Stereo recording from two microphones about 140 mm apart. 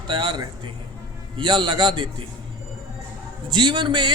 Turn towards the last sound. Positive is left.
turn(degrees=-35)  # may be behind; listen again after turning